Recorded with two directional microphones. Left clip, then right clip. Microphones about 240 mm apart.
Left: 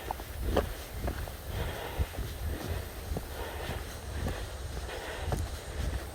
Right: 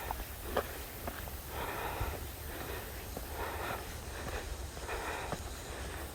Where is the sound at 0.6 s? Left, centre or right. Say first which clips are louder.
Left 4 dB; left.